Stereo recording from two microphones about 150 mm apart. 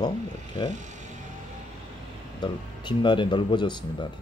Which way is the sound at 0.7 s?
55° right (ahead or behind).